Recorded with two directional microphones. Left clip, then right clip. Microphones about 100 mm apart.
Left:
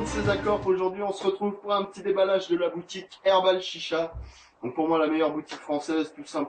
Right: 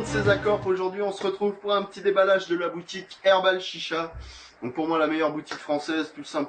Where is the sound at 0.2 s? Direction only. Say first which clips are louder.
Right 3 dB; centre (ahead or behind).